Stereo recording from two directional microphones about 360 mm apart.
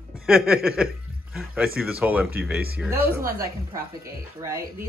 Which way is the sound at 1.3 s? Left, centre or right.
Centre.